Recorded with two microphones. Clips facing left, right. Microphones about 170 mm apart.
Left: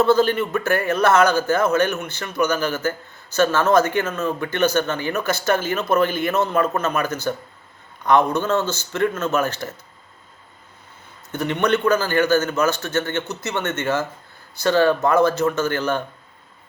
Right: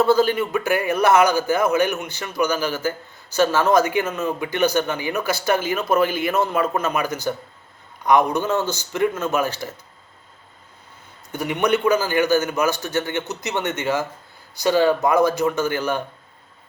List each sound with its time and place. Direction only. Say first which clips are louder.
0.0 s a man's voice: even; 10° right (ahead or behind)
11.3 s a man's voice: even; 10° right (ahead or behind)